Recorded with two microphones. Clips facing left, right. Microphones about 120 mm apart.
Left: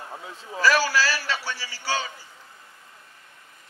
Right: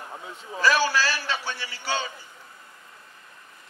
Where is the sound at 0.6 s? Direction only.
20° right (ahead or behind).